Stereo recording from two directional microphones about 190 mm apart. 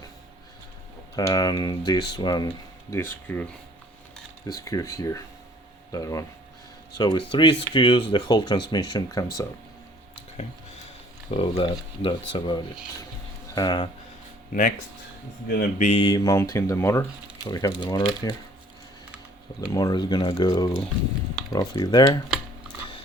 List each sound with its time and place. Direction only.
1.1 s speech: 20° left (ahead or behind)
4.4 s speech: 20° left (ahead or behind)
11.3 s speech: 30° left (ahead or behind)
13.6 s speech: 20° left (ahead or behind)
15.4 s speech: 55° left (ahead or behind)
16.0 s speech: 20° left (ahead or behind)
19.6 s speech: 20° left (ahead or behind)